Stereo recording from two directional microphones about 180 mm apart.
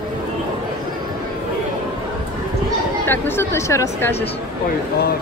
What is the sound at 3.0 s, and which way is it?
Speech, 10° left (ahead or behind).